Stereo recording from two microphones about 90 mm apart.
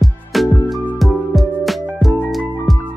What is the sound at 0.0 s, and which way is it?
Music, centre (ahead or behind).